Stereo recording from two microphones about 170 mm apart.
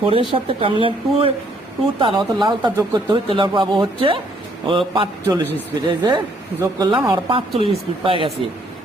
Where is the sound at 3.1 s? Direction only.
30° right (ahead or behind).